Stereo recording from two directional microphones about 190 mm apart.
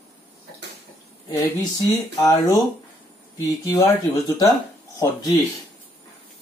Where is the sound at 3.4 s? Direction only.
20° left (ahead or behind).